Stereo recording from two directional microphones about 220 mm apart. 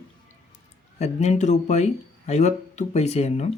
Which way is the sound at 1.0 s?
30° left (ahead or behind).